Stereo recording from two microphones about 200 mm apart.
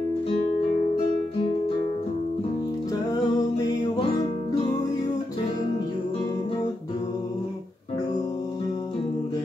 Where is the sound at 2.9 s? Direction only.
20° left (ahead or behind).